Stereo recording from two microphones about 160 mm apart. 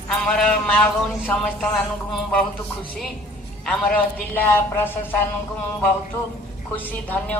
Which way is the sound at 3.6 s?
5° left (ahead or behind).